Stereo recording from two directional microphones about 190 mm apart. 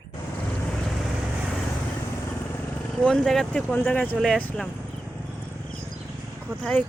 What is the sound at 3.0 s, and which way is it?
Speech, 5° left (ahead or behind).